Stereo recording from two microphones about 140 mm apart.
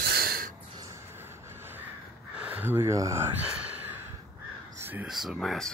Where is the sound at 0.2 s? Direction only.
90° right.